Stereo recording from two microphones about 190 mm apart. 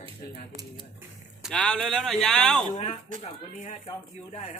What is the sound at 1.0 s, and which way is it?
Speech, centre (ahead or behind).